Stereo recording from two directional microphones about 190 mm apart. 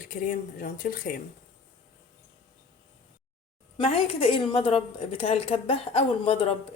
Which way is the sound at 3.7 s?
30° left (ahead or behind).